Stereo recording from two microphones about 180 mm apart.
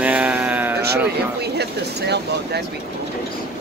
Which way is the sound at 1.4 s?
65° right (ahead or behind).